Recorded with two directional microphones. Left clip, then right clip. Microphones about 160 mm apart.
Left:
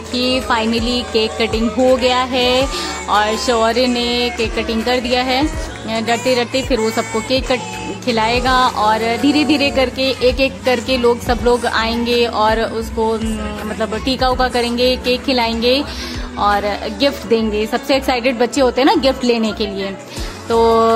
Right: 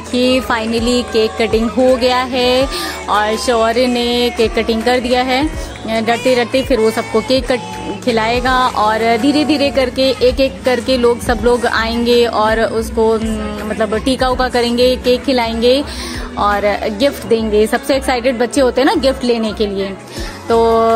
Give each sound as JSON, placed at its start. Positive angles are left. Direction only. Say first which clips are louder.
{"t": 0.2, "sound": "speech", "louder": "right 2 dB", "side_deg": -20}
{"t": 2.0, "sound": "a woman's voice", "louder": "right 1 dB", "side_deg": -30}